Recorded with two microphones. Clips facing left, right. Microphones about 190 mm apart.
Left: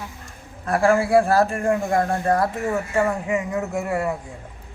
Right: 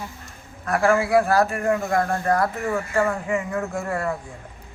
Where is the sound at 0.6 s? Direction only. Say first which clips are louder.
Left 1 dB; 30° left (ahead or behind); by 4.1 s 15° left (ahead or behind).